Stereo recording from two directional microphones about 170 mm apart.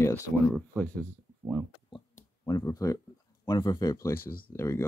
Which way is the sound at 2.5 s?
20° left (ahead or behind).